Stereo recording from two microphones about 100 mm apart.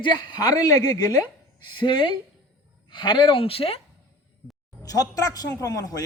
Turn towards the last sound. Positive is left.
turn(degrees=35)  # may be behind; listen again after turning